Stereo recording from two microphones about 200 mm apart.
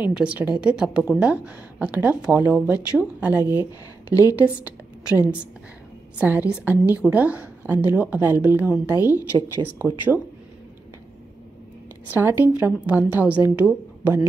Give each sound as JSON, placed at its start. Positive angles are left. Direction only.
{"t": 0.0, "sound": "a woman's voice", "side_deg": -5}
{"t": 4.1, "sound": "a woman's voice", "side_deg": 15}
{"t": 4.4, "sound": "a woman's voice", "side_deg": -5}
{"t": 9.8, "sound": "a woman's voice", "side_deg": -10}
{"t": 12.1, "sound": "a woman's voice", "side_deg": -10}